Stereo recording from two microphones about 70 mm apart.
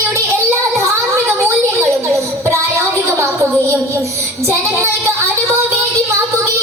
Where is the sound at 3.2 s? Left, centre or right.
Right.